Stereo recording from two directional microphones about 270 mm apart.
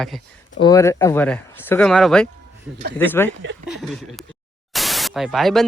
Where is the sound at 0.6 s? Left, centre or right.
Centre.